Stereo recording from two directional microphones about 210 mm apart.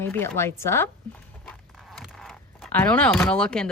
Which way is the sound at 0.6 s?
10° left (ahead or behind).